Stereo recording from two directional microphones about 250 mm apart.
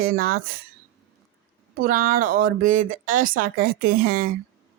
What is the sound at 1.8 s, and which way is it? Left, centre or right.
Speech, right.